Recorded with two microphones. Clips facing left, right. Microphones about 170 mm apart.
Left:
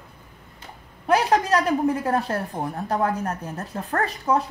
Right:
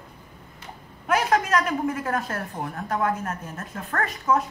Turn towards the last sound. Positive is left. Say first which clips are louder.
# left 1 dB
turn(degrees=35)  # may be behind; listen again after turning